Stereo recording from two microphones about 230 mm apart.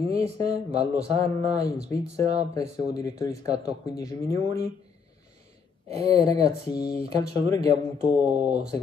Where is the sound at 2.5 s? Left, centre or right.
Centre.